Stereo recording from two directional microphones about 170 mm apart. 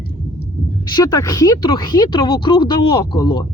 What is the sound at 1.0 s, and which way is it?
Speech, 20° left (ahead or behind).